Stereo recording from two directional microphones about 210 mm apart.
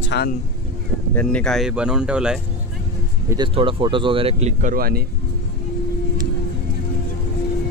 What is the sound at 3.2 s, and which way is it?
Speech, 20° right (ahead or behind).